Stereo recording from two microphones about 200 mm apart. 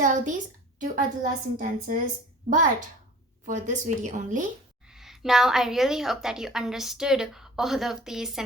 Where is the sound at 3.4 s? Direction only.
40° right (ahead or behind).